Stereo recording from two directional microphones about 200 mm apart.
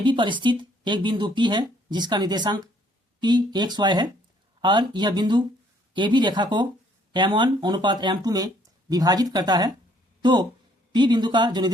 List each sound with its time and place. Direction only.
0.0 s speech: 25° right (ahead or behind)